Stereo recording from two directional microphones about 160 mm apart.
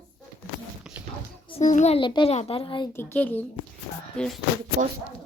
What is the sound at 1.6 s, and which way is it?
Speech, 45° left (ahead or behind).